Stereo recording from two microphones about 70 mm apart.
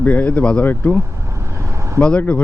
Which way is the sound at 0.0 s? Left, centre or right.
Left.